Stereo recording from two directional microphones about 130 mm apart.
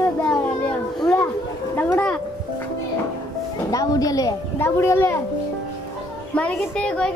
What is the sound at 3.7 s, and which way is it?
A woman's voice, 30° left (ahead or behind).